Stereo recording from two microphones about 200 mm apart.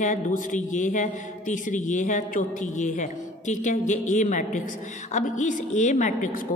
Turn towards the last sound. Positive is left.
turn(degrees=40)  # may be behind; listen again after turning